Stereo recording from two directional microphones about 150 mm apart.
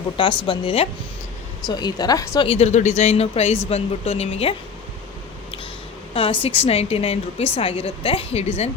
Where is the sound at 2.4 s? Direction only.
40° left (ahead or behind).